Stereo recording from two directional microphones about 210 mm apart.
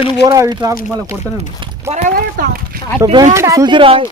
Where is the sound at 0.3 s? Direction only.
15° right (ahead or behind).